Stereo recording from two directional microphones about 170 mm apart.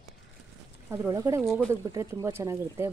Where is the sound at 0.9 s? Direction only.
15° right (ahead or behind).